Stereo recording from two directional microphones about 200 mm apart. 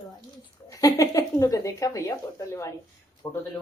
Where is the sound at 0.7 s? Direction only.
15° left (ahead or behind).